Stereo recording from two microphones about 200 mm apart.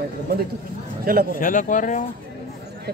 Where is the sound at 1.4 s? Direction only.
40° left (ahead or behind).